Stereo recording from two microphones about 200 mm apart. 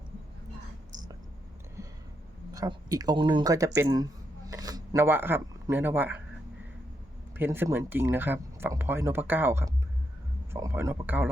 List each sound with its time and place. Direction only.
2.5 s speech: 15° right (ahead or behind)
7.3 s speech: 10° right (ahead or behind)